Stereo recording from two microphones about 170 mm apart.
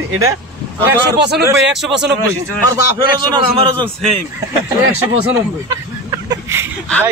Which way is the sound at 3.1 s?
30° right (ahead or behind).